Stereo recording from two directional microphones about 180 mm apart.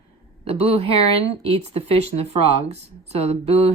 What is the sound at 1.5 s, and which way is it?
Speech, 35° right (ahead or behind).